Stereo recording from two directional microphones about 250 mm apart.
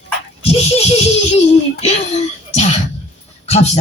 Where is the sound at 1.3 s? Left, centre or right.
Left.